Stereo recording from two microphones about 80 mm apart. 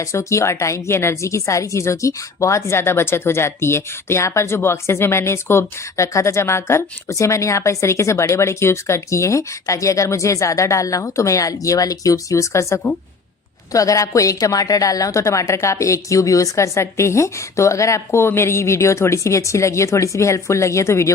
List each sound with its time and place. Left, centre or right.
0.0 s a woman's voice: left